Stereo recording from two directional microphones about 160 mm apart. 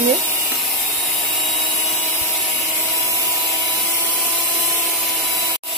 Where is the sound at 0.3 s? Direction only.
Centre (ahead or behind).